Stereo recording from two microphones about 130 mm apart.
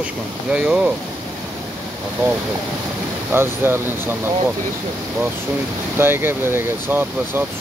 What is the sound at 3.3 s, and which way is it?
Speech, 15° right (ahead or behind).